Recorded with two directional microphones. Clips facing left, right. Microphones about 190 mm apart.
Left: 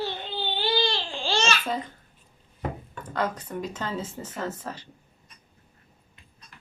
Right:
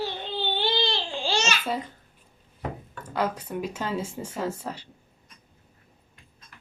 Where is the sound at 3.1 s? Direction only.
10° right (ahead or behind).